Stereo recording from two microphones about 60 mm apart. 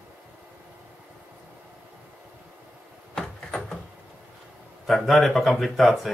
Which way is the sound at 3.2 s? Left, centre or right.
Centre.